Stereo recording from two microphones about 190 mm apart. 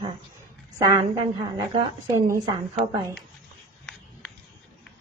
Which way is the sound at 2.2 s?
20° right (ahead or behind).